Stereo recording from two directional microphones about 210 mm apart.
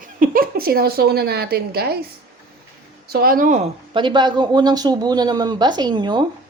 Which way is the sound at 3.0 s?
45° right (ahead or behind).